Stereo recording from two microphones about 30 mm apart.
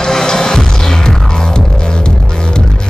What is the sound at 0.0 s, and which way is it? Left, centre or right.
Music, left.